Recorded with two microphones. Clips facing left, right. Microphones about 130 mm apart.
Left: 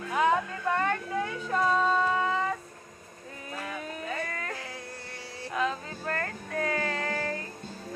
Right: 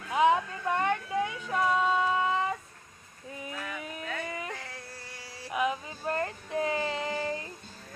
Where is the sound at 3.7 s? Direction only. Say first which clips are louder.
Left 2 dB; 25° left (ahead or behind).